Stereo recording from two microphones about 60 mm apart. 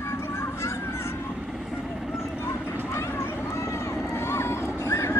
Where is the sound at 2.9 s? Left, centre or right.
Left.